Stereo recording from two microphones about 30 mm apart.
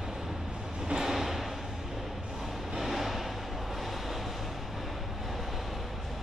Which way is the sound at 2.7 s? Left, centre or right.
Centre.